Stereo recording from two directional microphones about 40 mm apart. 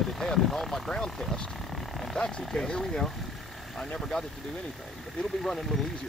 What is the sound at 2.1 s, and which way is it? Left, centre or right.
Speech, left.